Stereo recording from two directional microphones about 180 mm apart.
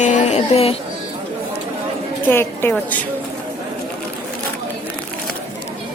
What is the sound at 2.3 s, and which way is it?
Speech, 15° left (ahead or behind).